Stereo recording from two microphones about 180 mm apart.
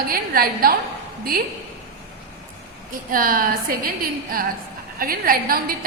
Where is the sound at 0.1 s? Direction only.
55° right (ahead or behind).